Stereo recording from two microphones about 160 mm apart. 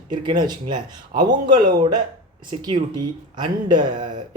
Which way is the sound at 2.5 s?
25° right (ahead or behind).